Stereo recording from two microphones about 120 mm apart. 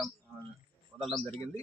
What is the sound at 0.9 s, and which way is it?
Speech, 10° right (ahead or behind).